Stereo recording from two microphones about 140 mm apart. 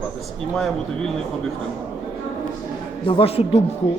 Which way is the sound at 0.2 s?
Centre (ahead or behind).